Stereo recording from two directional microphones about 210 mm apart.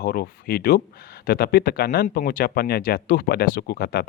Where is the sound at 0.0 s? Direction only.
45° left (ahead or behind).